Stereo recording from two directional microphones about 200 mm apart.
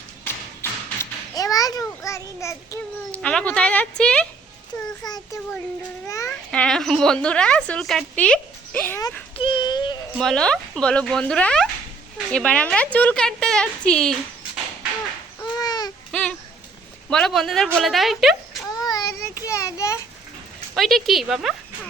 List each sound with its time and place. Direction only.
0.6 s a sound: 15° left (ahead or behind)
3.1 s a woman's voice: 5° left (ahead or behind)
5.0 s a child's voice: 20° left (ahead or behind)
6.2 s a woman's voice: 5° left (ahead or behind); by 10.0 s 20° left (ahead or behind)
10.2 s a woman's voice: centre (ahead or behind)
15.5 s baby cry: 20° left (ahead or behind)
17.1 s a woman's voice: centre (ahead or behind)
18.7 s child singing: 20° left (ahead or behind)
19.5 s a sound: 15° left (ahead or behind)
20.7 s a woman's voice: centre (ahead or behind)